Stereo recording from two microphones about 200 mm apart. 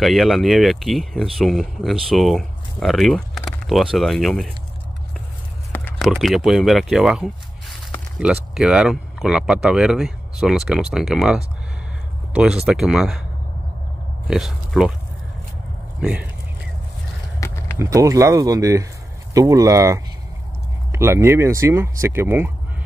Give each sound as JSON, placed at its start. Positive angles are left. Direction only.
{"t": 0.0, "sound": "speech", "side_deg": 0}
{"t": 5.7, "sound": "speech", "side_deg": 5}
{"t": 14.2, "sound": "speech", "side_deg": 0}
{"t": 16.0, "sound": "speech", "side_deg": -5}
{"t": 17.4, "sound": "a sound", "side_deg": 15}
{"t": 17.7, "sound": "speech", "side_deg": -15}